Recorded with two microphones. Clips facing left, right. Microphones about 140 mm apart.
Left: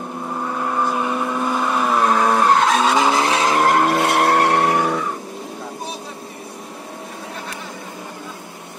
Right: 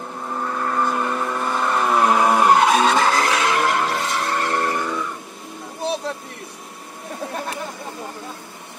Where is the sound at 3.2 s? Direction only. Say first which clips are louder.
Left 3 dB; 30° left (ahead or behind); by 5.2 s 70° left (ahead or behind).